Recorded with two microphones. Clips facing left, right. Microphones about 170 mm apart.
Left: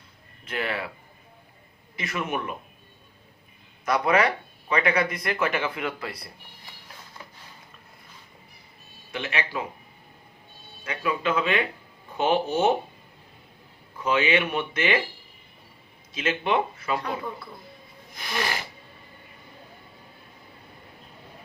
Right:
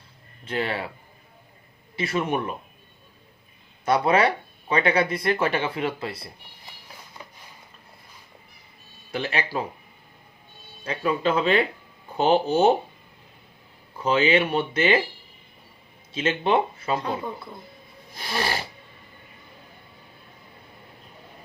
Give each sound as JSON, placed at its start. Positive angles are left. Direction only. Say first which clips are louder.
{"t": 0.4, "sound": "speech", "louder": "right 2 dB", "side_deg": -30}
{"t": 2.0, "sound": "speech", "louder": "right 5 dB", "side_deg": -30}
{"t": 3.8, "sound": "speech", "louder": "right 2 dB", "side_deg": -30}
{"t": 9.1, "sound": "speech", "louder": "right 3 dB", "side_deg": -35}
{"t": 10.8, "sound": "speech", "louder": "right 3 dB", "side_deg": -35}
{"t": 14.0, "sound": "speech", "louder": "right 3 dB", "side_deg": -30}
{"t": 16.1, "sound": "speech", "louder": "right 3 dB", "side_deg": -30}